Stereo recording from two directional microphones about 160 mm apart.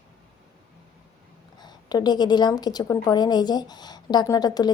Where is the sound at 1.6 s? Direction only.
25° left (ahead or behind).